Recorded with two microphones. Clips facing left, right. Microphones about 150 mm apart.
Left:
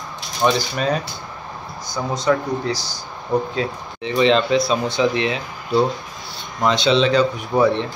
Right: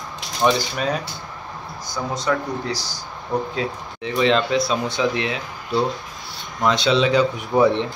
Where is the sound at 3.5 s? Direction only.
5° right (ahead or behind).